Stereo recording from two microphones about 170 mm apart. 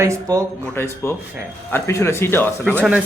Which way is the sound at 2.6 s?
10° right (ahead or behind).